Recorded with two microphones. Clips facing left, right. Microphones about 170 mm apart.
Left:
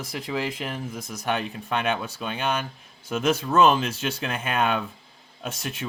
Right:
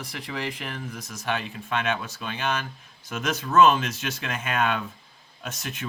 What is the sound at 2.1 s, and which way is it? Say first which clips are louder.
Speech: left 2 dB; 30° left (ahead or behind).